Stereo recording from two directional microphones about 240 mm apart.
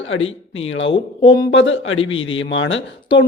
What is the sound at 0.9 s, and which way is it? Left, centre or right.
Speech, left.